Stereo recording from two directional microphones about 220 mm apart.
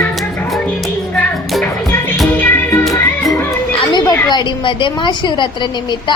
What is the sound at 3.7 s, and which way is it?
A woman's voice, 20° left (ahead or behind).